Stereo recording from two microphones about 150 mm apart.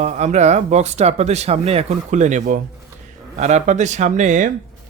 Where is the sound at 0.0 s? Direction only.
50° right (ahead or behind).